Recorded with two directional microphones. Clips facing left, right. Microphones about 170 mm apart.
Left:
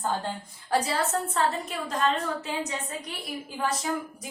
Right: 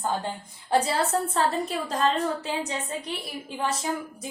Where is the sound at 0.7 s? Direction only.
30° right (ahead or behind).